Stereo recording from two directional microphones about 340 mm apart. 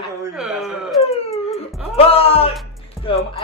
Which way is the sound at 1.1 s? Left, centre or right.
Centre.